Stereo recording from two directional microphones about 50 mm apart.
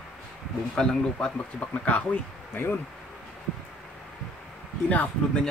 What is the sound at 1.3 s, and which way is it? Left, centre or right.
Speech, left.